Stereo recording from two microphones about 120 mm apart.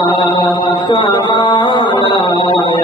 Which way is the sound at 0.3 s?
40° left (ahead or behind).